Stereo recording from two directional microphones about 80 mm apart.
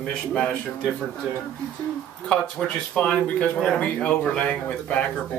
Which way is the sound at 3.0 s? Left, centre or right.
Centre.